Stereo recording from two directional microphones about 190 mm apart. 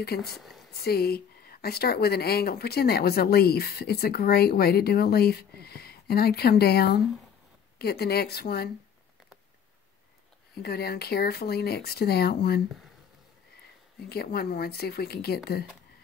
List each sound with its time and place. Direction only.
0.0 s speech: 55° left (ahead or behind)
0.4 s a sound: centre (ahead or behind)
0.8 s speech: 55° left (ahead or behind)
10.5 s speech: 55° left (ahead or behind)
13.9 s speech: 55° left (ahead or behind)